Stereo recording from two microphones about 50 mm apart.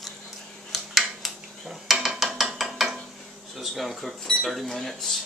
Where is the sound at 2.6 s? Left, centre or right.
Centre.